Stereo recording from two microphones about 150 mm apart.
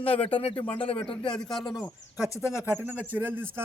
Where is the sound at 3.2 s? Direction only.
15° right (ahead or behind).